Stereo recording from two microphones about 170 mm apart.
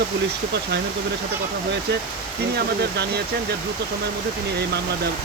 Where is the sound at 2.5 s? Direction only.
75° right (ahead or behind).